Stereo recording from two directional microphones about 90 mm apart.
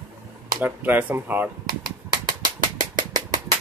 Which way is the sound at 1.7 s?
55° right (ahead or behind).